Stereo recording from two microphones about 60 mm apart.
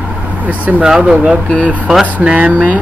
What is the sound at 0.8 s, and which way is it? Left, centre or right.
Speech, centre.